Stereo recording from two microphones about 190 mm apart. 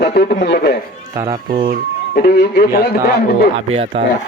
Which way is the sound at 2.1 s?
55° left (ahead or behind).